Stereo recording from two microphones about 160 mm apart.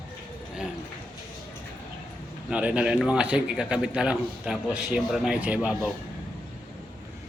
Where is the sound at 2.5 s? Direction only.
5° right (ahead or behind).